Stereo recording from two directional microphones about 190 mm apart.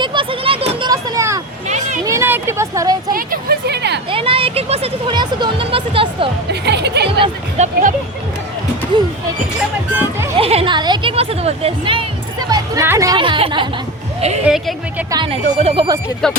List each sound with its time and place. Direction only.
0.0 s a sound: 25° right (ahead or behind)
1.6 s a sound: 40° right (ahead or behind)
2.0 s vehicle: 15° right (ahead or behind)
3.1 s a sound: 50° right (ahead or behind)
4.1 s a sound: 30° right (ahead or behind)
6.5 s music: 60° right (ahead or behind)
7.2 s speech: 35° right (ahead or behind)
8.9 s speech: 25° right (ahead or behind)
9.9 s speech: 10° right (ahead or behind)
10.3 s speech: 30° right (ahead or behind)
12.5 s a woman's voice: 15° right (ahead or behind); by 14.4 s 35° right (ahead or behind)
14.4 s a woman's voice: 5° right (ahead or behind)
15.1 s speech: 30° right (ahead or behind)
16.2 s a woman's voice: 5° left (ahead or behind)